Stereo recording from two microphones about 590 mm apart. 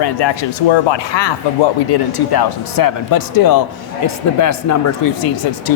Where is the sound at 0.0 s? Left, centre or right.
Left.